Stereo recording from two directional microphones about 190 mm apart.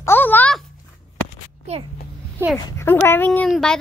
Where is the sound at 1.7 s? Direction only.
35° right (ahead or behind).